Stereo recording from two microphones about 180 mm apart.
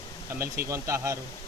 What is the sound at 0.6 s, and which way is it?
Speech, 15° right (ahead or behind).